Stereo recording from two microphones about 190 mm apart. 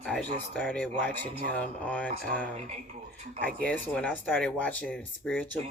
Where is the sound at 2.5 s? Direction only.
35° right (ahead or behind).